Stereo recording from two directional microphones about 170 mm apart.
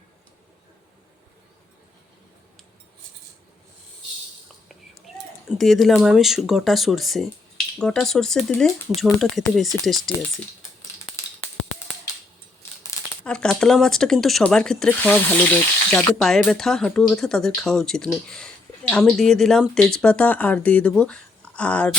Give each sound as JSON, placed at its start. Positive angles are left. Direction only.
{"t": 4.9, "sound": "speech", "side_deg": 0}
{"t": 12.9, "sound": "crumpling", "side_deg": 20}
{"t": 13.2, "sound": "speech", "side_deg": 5}